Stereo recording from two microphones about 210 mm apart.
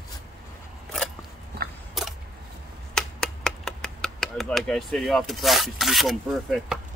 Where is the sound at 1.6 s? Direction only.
50° right (ahead or behind).